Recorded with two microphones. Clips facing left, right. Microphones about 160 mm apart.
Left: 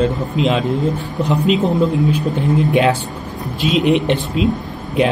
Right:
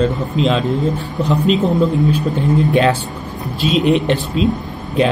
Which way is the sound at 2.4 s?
20° left (ahead or behind).